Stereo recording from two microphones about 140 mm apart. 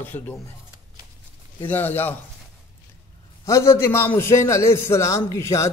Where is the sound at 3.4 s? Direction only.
20° left (ahead or behind).